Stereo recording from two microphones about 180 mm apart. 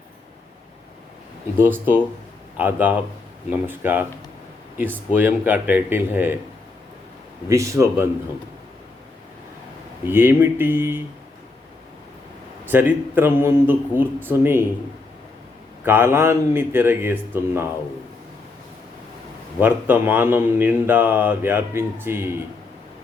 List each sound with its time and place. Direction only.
1.5 s speech: 10° right (ahead or behind)
5.1 s speech: 10° right (ahead or behind)
7.4 s speech: 15° right (ahead or behind)
10.1 s speech: 10° right (ahead or behind)
12.6 s speech: 10° right (ahead or behind)
15.8 s speech: 10° right (ahead or behind)
19.5 s speech: 10° right (ahead or behind)